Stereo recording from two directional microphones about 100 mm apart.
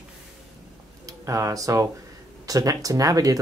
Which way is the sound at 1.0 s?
30° right (ahead or behind).